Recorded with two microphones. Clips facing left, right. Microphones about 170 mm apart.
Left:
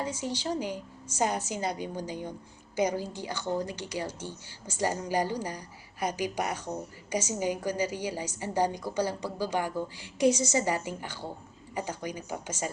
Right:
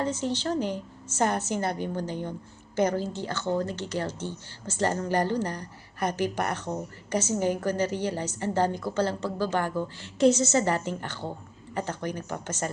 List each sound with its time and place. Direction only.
0.0 s speech: 10° left (ahead or behind)